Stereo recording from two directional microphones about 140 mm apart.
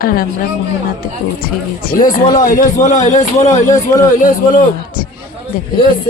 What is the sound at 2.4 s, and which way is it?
A man's voice, 75° left (ahead or behind).